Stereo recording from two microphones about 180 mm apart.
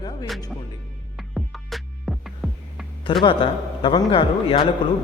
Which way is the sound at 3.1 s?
30° left (ahead or behind).